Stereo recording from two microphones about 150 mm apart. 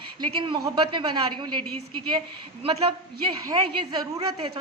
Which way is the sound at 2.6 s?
40° right (ahead or behind).